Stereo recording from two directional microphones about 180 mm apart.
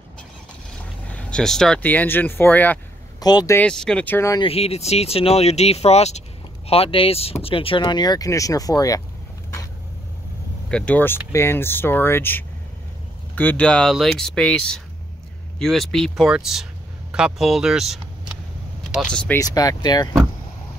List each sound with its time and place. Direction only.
1.1 s speech: 5° left (ahead or behind)
3.2 s speech: 20° left (ahead or behind)
3.5 s speech: 5° left (ahead or behind)
4.4 s speech: 35° left (ahead or behind)
10.7 s speech: 10° left (ahead or behind)
19.3 s speech: 20° left (ahead or behind)